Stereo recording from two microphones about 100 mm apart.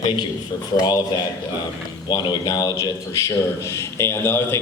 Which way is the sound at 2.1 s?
45° left (ahead or behind).